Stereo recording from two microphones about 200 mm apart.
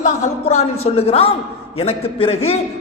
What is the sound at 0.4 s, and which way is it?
A man's voice, 30° left (ahead or behind).